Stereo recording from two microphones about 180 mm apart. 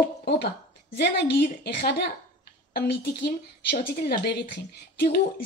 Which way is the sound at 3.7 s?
60° left (ahead or behind).